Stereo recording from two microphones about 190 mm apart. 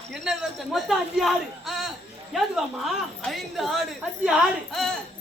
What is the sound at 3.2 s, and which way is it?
Speech, centre (ahead or behind).